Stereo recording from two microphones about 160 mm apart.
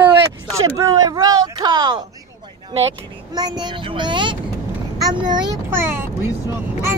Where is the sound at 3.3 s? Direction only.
25° right (ahead or behind).